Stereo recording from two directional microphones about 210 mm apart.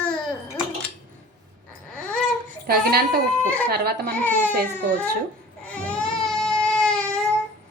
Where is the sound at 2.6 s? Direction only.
45° right (ahead or behind).